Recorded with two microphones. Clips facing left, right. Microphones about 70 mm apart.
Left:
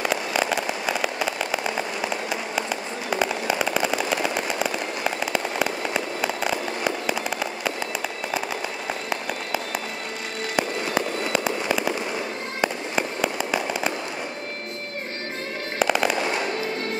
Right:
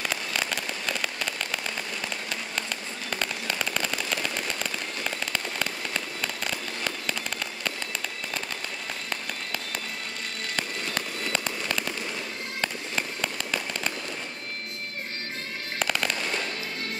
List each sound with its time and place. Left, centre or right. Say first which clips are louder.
0.0 s fireworks: left 7 dB; centre
9.1 s a sound: left 6 dB; centre
10.5 s fireworks: left 8 dB; centre
15.8 s fireworks: left 7 dB; centre
16.2 s fireworks: left 6 dB; left